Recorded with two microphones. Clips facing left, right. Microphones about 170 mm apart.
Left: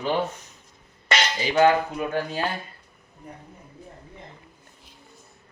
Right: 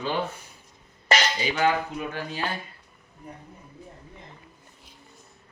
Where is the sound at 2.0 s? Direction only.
50° left (ahead or behind).